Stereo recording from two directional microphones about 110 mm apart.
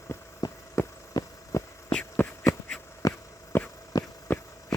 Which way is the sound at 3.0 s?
30° left (ahead or behind).